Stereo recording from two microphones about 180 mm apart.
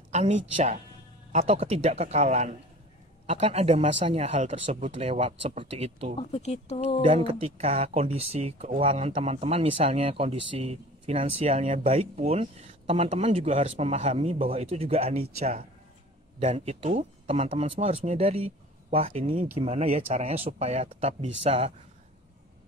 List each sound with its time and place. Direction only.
0.1 s speech: 40° right (ahead or behind)
6.1 s speech: 35° left (ahead or behind)
7.0 s speech: 30° right (ahead or behind)